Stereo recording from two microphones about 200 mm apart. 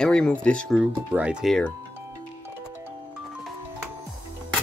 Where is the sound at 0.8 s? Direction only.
5° right (ahead or behind).